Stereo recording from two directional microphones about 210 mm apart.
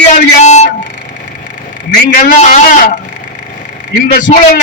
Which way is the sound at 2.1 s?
40° left (ahead or behind).